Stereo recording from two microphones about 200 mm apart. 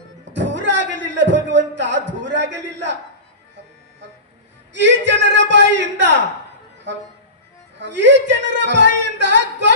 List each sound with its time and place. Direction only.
0.2 s music: 65° right (ahead or behind)
0.9 s a sound: 65° right (ahead or behind)
4.7 s speech: 60° right (ahead or behind)
7.8 s a man's voice: 60° right (ahead or behind)
9.0 s female singing: 60° right (ahead or behind)